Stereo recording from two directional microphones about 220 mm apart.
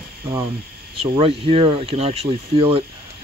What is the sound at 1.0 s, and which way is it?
Speech, 25° right (ahead or behind).